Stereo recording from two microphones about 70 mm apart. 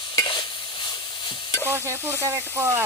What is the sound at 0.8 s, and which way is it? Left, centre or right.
Stir, left.